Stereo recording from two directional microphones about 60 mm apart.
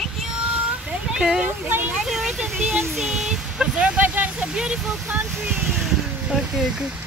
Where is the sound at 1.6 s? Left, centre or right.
Right.